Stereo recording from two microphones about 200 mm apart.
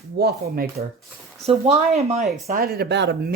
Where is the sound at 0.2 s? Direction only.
50° right (ahead or behind).